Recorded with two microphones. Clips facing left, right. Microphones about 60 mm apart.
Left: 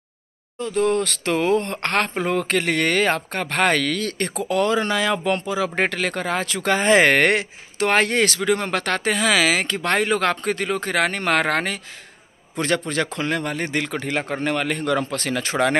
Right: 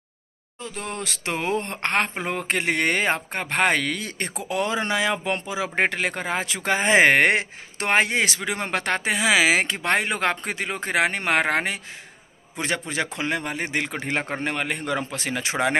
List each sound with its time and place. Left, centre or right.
0.6 s speech: centre